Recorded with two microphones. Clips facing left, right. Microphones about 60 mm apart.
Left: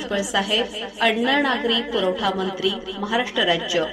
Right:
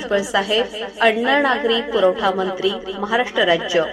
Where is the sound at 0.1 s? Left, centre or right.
Right.